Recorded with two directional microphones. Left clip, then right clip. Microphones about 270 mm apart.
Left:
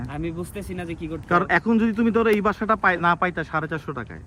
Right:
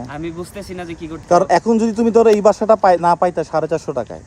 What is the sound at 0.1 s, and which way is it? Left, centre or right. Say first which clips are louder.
Speech: right 1 dB; centre.